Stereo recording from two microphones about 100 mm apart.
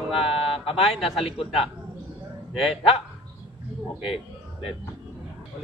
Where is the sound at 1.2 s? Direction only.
65° left (ahead or behind).